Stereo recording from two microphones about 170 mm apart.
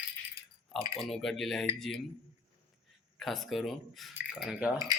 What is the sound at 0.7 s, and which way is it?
Speech, centre (ahead or behind).